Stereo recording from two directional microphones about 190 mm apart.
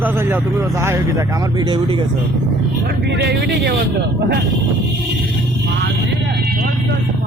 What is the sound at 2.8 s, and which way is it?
Speech, 60° right (ahead or behind).